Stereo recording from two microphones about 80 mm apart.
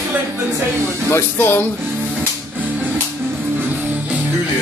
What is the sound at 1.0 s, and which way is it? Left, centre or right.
Speech, left.